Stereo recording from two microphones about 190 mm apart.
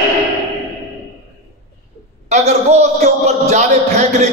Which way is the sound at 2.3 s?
35° right (ahead or behind).